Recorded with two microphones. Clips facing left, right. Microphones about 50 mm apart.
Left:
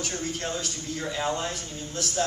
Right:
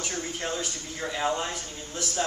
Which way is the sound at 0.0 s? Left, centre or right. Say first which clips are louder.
Left 1 dB; centre.